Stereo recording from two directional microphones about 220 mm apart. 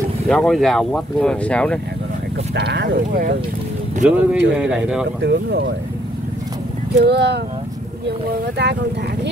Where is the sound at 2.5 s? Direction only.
50° right (ahead or behind).